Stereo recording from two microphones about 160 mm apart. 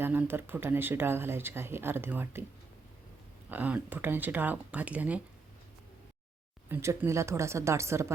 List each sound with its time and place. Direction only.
0.0 s speech: 10° right (ahead or behind)
3.5 s speech: 10° right (ahead or behind)
6.7 s speech: 15° right (ahead or behind)